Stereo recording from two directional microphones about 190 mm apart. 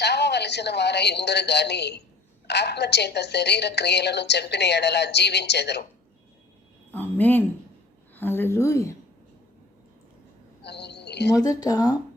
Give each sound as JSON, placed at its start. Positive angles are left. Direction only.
{"t": 0.0, "sound": "a woman's voice", "side_deg": 60}
{"t": 6.9, "sound": "a woman's voice", "side_deg": 10}
{"t": 10.6, "sound": "a sound", "side_deg": 65}
{"t": 11.3, "sound": "speech", "side_deg": 20}